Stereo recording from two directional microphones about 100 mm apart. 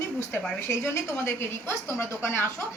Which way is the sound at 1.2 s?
25° left (ahead or behind).